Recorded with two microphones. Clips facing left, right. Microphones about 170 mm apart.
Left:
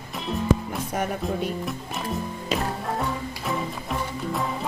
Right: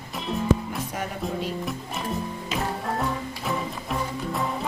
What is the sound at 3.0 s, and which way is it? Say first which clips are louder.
Music: even; centre (ahead or behind).